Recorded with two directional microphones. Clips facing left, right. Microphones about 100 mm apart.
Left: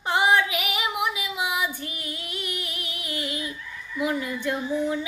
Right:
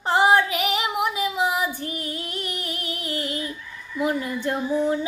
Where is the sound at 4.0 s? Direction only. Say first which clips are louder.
Right 2 dB; 40° right (ahead or behind).